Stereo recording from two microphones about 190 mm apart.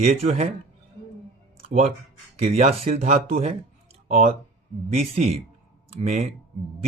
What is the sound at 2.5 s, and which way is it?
Speech, 45° right (ahead or behind).